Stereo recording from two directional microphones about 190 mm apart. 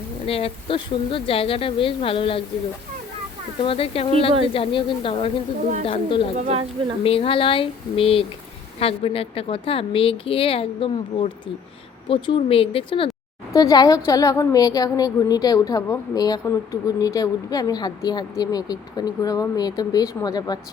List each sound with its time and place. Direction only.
0.3 s a woman's voice: 30° left (ahead or behind)
3.6 s a woman's voice: 30° left (ahead or behind)
6.4 s speech: 30° right (ahead or behind)
7.0 s a woman's voice: 30° left (ahead or behind)